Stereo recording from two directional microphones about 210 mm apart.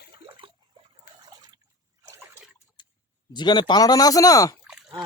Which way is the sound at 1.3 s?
20° right (ahead or behind).